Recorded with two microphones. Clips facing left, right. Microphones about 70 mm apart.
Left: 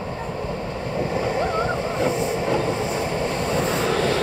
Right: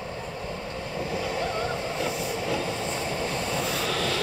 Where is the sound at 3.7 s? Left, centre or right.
Left.